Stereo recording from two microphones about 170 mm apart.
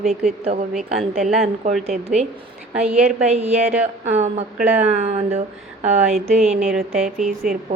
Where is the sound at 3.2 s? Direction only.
40° right (ahead or behind).